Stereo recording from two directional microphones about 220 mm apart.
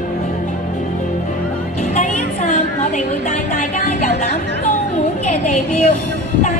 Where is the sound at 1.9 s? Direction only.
30° left (ahead or behind).